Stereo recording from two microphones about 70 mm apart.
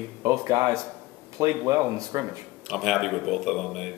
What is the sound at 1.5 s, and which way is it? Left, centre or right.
Speech, right.